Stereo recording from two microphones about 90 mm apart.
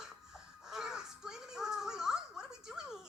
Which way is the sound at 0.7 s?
5° right (ahead or behind).